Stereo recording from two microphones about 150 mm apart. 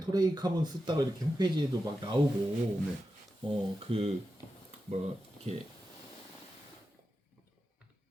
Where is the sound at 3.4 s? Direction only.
40° right (ahead or behind).